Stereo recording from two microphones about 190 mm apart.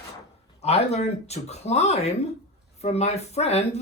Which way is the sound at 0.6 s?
35° left (ahead or behind).